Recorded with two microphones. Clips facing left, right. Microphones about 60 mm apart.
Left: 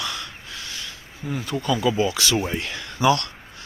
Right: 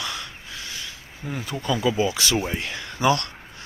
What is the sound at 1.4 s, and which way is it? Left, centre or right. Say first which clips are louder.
Speech: left 1 dB; centre.